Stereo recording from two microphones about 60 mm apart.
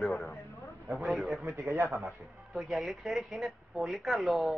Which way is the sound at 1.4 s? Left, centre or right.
Right.